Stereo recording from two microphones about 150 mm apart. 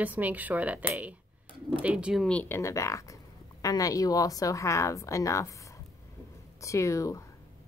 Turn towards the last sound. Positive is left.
turn(degrees=20)  # may be behind; listen again after turning